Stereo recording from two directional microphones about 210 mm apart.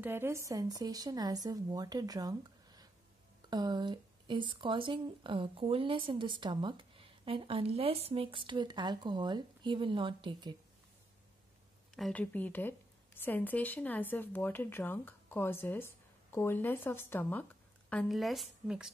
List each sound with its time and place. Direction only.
0.0 s speech: 10° right (ahead or behind)
11.9 s speech: 5° left (ahead or behind)